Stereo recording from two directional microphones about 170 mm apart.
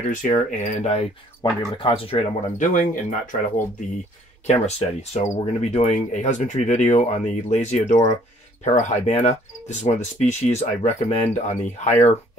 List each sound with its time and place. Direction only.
0.1 s speech: 50° left (ahead or behind); by 2.1 s 30° left (ahead or behind)
2.5 s speech: 50° left (ahead or behind)
4.5 s speech: 40° left (ahead or behind)